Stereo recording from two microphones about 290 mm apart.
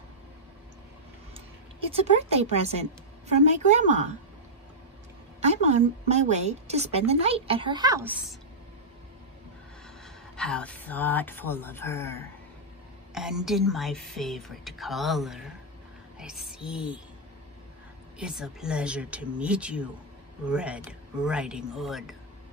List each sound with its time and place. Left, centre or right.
1.9 s a woman's voice: right
5.4 s a woman's voice: right
10.3 s a woman's voice: centre
18.2 s a woman's voice: centre